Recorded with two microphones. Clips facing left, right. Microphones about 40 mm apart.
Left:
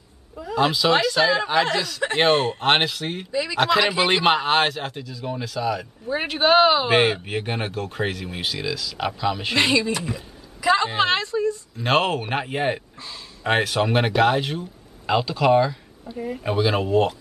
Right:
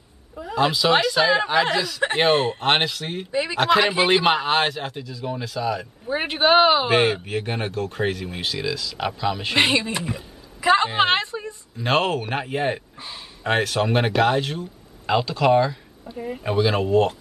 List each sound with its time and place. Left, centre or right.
0.6 s speech: centre
3.3 s speech: right
3.5 s speech: centre
6.0 s speech: centre
6.9 s speech: centre
9.6 s a woman's voice: right
11.8 s speech: centre